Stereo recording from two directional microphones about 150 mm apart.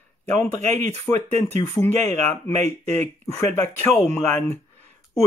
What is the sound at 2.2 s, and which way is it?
Speech, 15° left (ahead or behind).